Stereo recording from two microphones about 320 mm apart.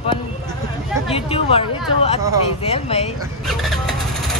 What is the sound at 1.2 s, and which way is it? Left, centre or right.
Speech, centre.